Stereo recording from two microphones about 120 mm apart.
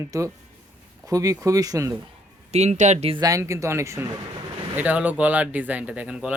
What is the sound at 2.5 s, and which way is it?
Speech, 65° right (ahead or behind).